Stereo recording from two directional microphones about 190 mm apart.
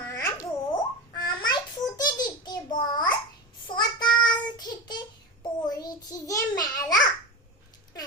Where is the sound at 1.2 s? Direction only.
20° left (ahead or behind).